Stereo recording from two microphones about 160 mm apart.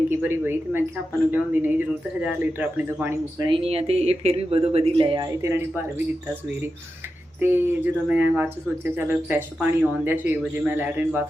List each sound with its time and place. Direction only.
0.1 s speech: 15° right (ahead or behind)
3.3 s speech: 30° right (ahead or behind)
7.3 s speech: 15° right (ahead or behind)